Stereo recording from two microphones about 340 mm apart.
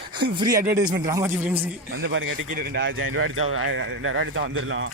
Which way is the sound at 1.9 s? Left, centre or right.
Right.